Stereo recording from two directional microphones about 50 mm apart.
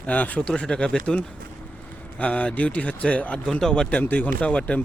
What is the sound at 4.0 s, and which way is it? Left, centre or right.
Speech, left.